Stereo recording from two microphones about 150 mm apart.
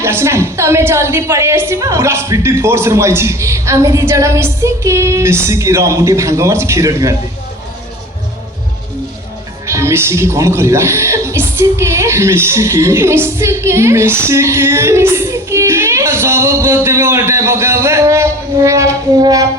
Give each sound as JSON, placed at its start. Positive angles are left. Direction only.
{"t": 0.0, "sound": "a woman's voice", "side_deg": -15}
{"t": 9.6, "sound": "speech", "side_deg": -20}